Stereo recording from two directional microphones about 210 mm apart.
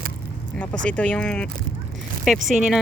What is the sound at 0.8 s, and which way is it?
Speech, 5° left (ahead or behind).